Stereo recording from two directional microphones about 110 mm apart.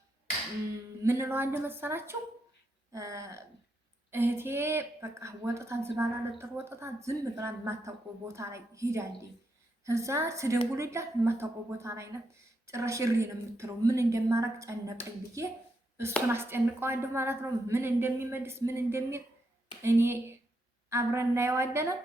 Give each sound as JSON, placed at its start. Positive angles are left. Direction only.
{"t": 1.0, "sound": "a woman's voice", "side_deg": -20}
{"t": 16.3, "sound": "a woman's voice", "side_deg": -20}